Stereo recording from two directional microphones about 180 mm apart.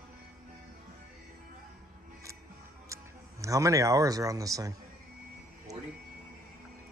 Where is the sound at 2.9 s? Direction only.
20° right (ahead or behind).